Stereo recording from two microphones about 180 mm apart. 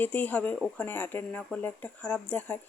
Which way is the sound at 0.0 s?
10° left (ahead or behind).